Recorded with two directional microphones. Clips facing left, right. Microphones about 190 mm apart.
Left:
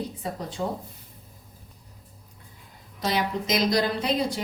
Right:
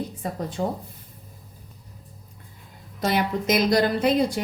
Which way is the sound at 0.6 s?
35° right (ahead or behind).